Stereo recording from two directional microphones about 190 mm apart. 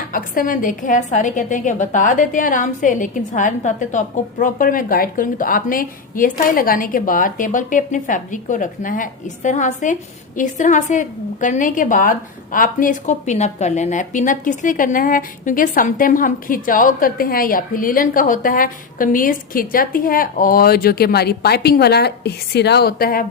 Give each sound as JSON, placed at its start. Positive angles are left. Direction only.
{"t": 0.1, "sound": "a woman's voice", "side_deg": 45}